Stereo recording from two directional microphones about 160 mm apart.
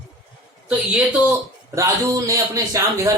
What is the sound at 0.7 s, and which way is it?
Speech, 5° right (ahead or behind).